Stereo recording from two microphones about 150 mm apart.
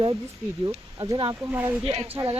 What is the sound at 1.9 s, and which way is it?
Speech, 45° right (ahead or behind).